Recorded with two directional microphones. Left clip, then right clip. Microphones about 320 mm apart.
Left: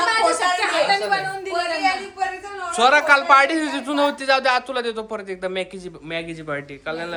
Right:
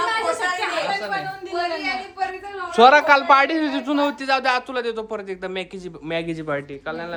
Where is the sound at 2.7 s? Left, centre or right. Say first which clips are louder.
Right 2 dB; centre.